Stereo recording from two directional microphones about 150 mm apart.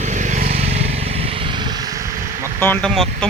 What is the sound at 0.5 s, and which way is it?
Vehicle, 40° right (ahead or behind).